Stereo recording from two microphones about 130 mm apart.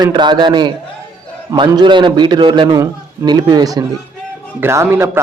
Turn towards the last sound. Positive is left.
turn(degrees=-20)  # may be behind; listen again after turning